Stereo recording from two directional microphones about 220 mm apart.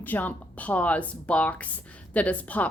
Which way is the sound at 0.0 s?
5° left (ahead or behind).